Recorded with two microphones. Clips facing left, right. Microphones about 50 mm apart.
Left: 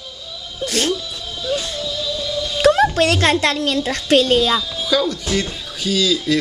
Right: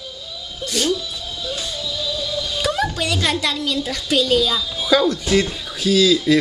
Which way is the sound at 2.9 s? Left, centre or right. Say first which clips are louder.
Left 6 dB; left.